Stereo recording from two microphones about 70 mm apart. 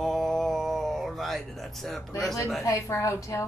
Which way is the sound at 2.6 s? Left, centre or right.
Left.